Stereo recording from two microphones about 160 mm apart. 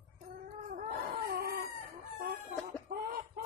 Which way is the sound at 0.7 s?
55° right (ahead or behind).